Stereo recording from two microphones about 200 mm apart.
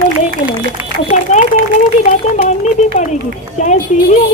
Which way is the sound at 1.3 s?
35° left (ahead or behind).